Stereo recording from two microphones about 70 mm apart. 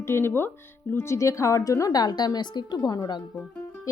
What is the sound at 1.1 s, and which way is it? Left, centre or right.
A woman's voice, left.